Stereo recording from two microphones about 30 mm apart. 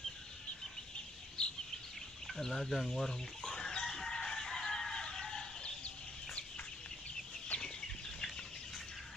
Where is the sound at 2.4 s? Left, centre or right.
Centre.